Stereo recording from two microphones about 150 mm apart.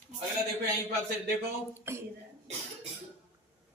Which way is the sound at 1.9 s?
15° right (ahead or behind).